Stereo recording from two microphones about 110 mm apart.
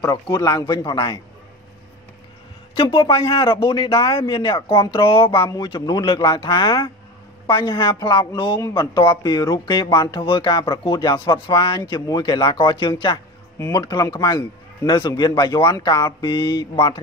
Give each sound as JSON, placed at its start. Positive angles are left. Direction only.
{"t": 0.0, "sound": "a man's voice", "side_deg": 30}
{"t": 0.9, "sound": "speech", "side_deg": 50}
{"t": 2.7, "sound": "speech", "side_deg": 55}
{"t": 5.5, "sound": "speech", "side_deg": 40}
{"t": 8.5, "sound": "a man's voice", "side_deg": 35}